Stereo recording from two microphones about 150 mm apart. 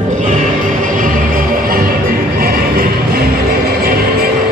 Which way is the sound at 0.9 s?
65° right (ahead or behind).